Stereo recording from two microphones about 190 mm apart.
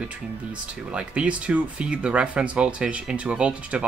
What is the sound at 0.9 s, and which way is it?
Speech, 5° right (ahead or behind).